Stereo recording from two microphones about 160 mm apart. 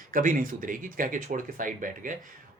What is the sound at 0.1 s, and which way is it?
Speech, 55° right (ahead or behind).